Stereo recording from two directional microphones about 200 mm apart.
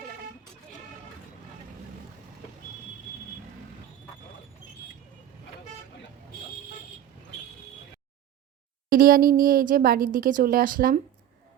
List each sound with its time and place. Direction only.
8.9 s speech: 45° right (ahead or behind)